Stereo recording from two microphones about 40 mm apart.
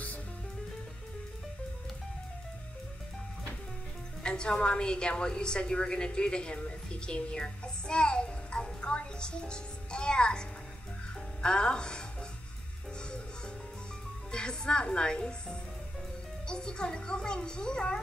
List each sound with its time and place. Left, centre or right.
4.2 s a woman's voice: left
11.4 s a child's voice: left
14.3 s a child's voice: left